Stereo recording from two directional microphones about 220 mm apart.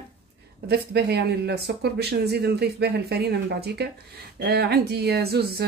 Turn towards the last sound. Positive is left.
turn(degrees=-45)  # may be behind; listen again after turning